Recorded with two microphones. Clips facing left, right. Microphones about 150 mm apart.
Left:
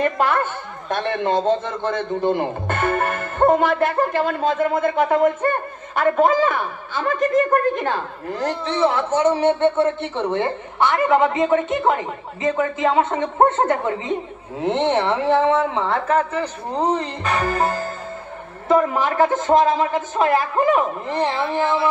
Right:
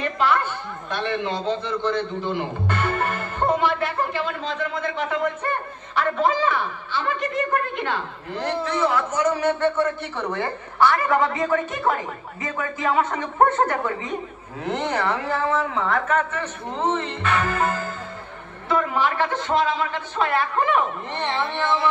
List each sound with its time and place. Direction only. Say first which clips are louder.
0.0 s a man's voice: left 3 dB; 50° left (ahead or behind)
8.6 s a man's voice: left 4 dB; 30° left (ahead or behind)